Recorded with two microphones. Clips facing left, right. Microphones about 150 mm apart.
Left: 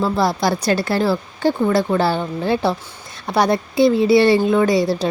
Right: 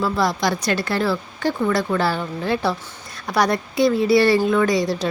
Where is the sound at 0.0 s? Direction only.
30° left (ahead or behind).